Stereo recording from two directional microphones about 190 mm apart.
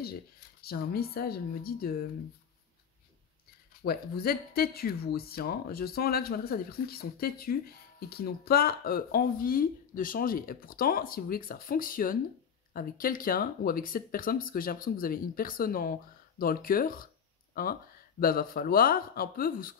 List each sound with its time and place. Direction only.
0.0 s speech: 55° left (ahead or behind)
3.8 s speech: 55° left (ahead or behind)